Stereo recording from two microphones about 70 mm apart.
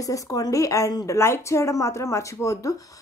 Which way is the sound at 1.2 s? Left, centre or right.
Left.